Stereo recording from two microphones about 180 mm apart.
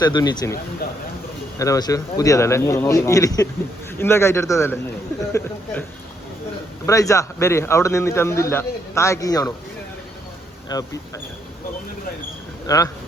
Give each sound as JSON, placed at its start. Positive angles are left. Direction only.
{"t": 0.0, "sound": "speech", "side_deg": 25}
{"t": 1.5, "sound": "speech", "side_deg": 20}
{"t": 6.8, "sound": "speech", "side_deg": 20}
{"t": 10.7, "sound": "speech", "side_deg": 20}
{"t": 12.6, "sound": "speech", "side_deg": 20}